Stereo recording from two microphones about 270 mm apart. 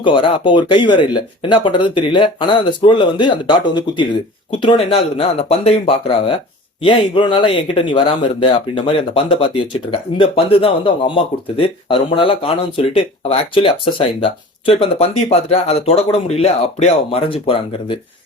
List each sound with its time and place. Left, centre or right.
0.0 s speech: centre